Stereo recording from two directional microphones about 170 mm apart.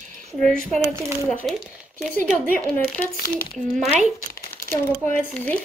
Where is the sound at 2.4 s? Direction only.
10° left (ahead or behind).